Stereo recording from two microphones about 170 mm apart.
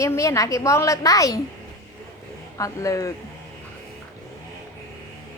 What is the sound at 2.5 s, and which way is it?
Speech, 20° left (ahead or behind).